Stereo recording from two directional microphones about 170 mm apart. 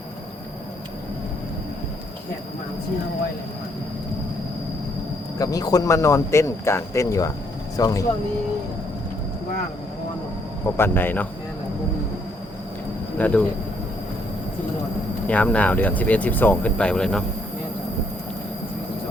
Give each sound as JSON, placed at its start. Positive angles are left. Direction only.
{"t": 5.4, "sound": "speech", "side_deg": 20}
{"t": 10.8, "sound": "speech", "side_deg": 10}
{"t": 13.1, "sound": "speech", "side_deg": 10}
{"t": 15.3, "sound": "speech", "side_deg": 5}